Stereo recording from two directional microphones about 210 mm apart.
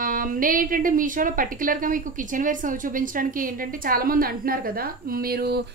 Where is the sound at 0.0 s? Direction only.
40° right (ahead or behind).